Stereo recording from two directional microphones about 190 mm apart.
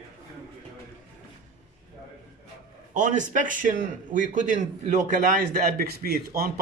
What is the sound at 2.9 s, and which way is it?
A man's voice, 40° right (ahead or behind).